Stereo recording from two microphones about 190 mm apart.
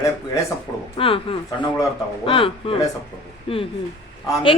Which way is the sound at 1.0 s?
30° left (ahead or behind).